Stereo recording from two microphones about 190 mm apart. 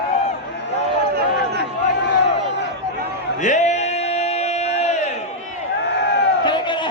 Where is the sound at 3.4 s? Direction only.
40° left (ahead or behind).